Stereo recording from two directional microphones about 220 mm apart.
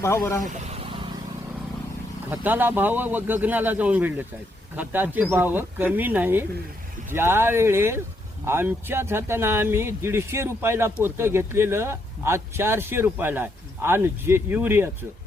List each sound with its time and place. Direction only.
0.0 s speech: 15° left (ahead or behind)
0.4 s vehicle: 30° right (ahead or behind)
2.3 s speech: 10° right (ahead or behind)